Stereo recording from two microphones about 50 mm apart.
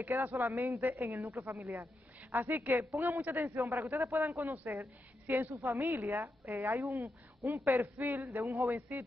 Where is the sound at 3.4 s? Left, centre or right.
Right.